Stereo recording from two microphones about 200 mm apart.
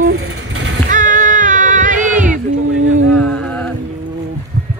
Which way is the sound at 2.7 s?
90° right.